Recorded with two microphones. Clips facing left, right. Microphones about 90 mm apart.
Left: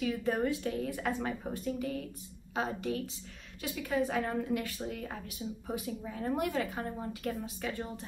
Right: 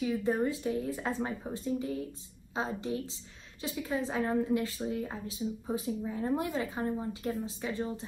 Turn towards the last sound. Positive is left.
turn(degrees=-20)  # may be behind; listen again after turning